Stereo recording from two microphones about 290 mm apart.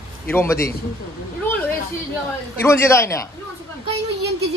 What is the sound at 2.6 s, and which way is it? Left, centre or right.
Speech, centre.